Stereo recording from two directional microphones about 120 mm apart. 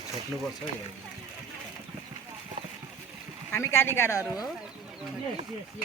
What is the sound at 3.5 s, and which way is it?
Speech, 20° left (ahead or behind).